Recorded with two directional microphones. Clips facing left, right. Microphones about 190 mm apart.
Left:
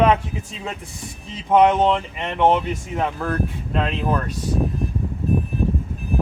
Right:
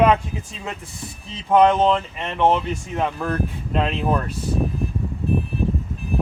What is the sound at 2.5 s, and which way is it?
Speech, 5° left (ahead or behind).